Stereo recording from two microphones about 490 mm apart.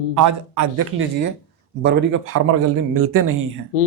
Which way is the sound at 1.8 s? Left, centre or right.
Right.